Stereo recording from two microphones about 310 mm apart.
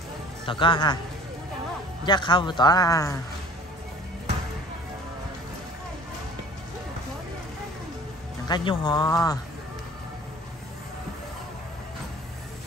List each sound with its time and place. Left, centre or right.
0.5 s speech: centre
2.0 s speech: centre
8.5 s speech: centre